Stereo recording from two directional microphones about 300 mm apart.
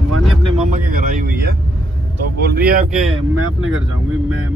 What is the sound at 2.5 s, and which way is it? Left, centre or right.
Speech, right.